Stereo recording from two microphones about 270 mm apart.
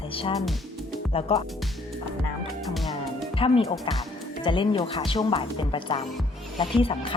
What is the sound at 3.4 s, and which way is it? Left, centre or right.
Speech, centre.